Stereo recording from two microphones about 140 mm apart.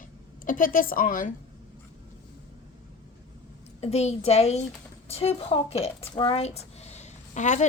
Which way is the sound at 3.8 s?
50° left (ahead or behind).